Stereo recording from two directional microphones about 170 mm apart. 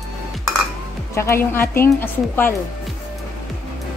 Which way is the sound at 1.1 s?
15° left (ahead or behind).